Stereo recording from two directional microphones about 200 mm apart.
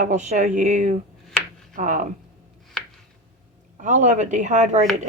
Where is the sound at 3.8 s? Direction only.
40° right (ahead or behind).